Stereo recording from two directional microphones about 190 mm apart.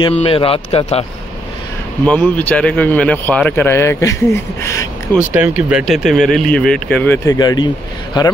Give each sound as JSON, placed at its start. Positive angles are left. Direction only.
{"t": 0.0, "sound": "speech", "side_deg": 30}
{"t": 2.0, "sound": "speech", "side_deg": 10}
{"t": 5.2, "sound": "speech", "side_deg": -10}
{"t": 7.3, "sound": "speech", "side_deg": 20}